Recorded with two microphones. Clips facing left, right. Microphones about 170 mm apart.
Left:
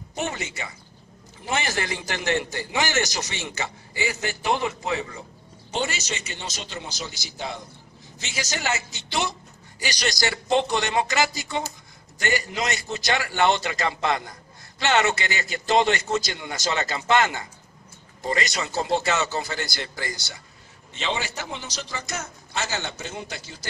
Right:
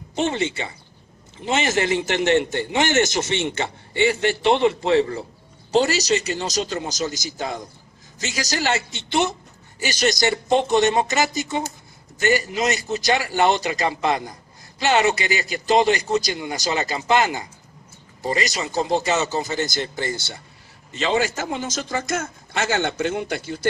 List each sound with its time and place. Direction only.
0.1 s speech: 25° right (ahead or behind)
9.8 s speech: 45° right (ahead or behind)
10.0 s speech: 20° right (ahead or behind)
12.5 s a man's voice: 20° right (ahead or behind)
20.9 s a man's voice: 45° right (ahead or behind)